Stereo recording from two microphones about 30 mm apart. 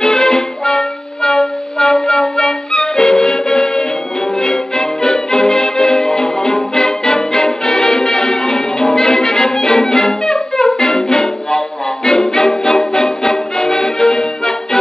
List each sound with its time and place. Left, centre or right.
0.0 s music: left